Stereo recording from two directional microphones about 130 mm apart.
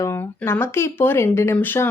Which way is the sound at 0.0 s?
20° left (ahead or behind).